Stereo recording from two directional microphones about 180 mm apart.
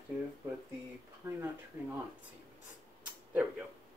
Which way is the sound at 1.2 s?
10° right (ahead or behind).